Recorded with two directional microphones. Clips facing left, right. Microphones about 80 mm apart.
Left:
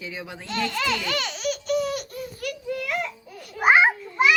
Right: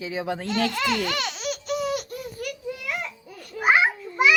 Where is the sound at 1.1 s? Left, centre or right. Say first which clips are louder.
Left 1 dB; centre.